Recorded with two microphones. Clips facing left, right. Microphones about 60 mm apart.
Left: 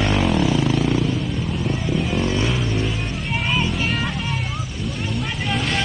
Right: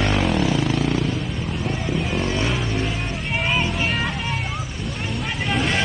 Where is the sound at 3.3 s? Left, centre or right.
Centre.